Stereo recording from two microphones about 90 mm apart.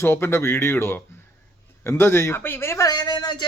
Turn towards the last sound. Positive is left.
turn(degrees=50)  # may be behind; listen again after turning